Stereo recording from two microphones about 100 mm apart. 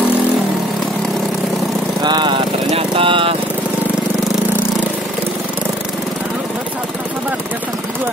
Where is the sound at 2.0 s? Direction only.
50° right (ahead or behind).